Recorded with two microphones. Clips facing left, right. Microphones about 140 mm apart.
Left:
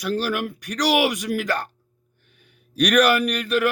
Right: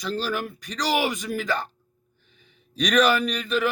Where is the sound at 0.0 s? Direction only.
10° left (ahead or behind).